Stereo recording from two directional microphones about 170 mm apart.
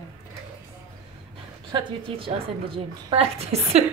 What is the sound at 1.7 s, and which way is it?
A woman's voice, 30° right (ahead or behind).